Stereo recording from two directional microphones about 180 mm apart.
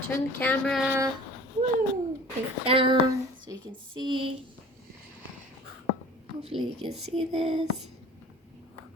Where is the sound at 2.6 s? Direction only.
30° right (ahead or behind).